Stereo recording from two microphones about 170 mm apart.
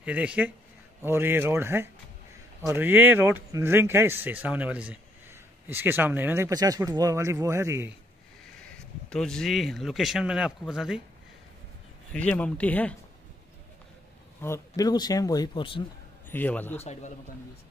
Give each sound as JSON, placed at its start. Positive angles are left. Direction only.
{"t": 0.0, "sound": "speech", "side_deg": -10}
{"t": 8.6, "sound": "speech", "side_deg": 5}
{"t": 12.1, "sound": "speech", "side_deg": 5}
{"t": 14.4, "sound": "speech", "side_deg": 20}
{"t": 16.3, "sound": "speech", "side_deg": 10}
{"t": 16.8, "sound": "a man's voice", "side_deg": 40}